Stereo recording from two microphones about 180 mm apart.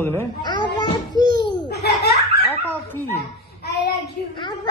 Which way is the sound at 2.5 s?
10° left (ahead or behind).